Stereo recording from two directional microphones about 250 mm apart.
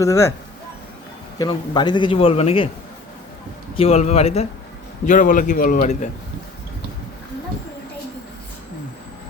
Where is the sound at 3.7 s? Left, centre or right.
Left.